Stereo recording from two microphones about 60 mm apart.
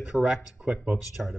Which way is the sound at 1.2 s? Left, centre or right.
Centre.